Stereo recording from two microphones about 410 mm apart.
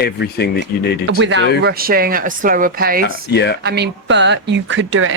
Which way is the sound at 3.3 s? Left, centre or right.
Left.